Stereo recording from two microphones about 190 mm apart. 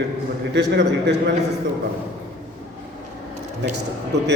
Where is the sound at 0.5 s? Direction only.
65° right (ahead or behind).